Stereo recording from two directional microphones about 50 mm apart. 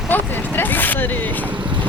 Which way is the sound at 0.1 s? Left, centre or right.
Left.